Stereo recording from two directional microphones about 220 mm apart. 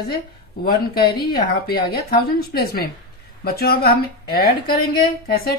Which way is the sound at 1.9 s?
45° left (ahead or behind).